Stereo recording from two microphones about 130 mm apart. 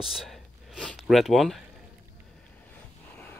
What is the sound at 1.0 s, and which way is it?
Speech, centre (ahead or behind).